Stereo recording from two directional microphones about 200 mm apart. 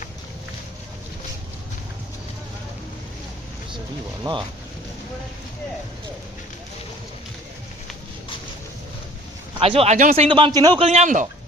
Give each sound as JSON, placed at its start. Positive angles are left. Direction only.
{"t": 4.2, "sound": "a man's voice", "side_deg": -20}
{"t": 9.6, "sound": "speech", "side_deg": -30}
{"t": 10.2, "sound": "a man's voice", "side_deg": -25}
{"t": 10.8, "sound": "speech", "side_deg": -35}